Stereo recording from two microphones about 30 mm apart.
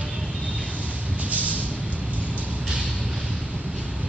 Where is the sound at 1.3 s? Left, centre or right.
Right.